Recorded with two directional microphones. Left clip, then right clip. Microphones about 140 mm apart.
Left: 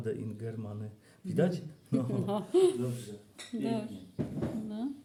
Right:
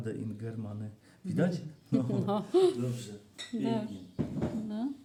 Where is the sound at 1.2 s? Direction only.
25° left (ahead or behind).